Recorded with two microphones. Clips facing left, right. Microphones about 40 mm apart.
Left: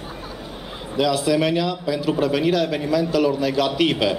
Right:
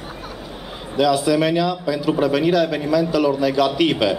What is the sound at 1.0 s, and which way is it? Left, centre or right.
A man's voice, centre.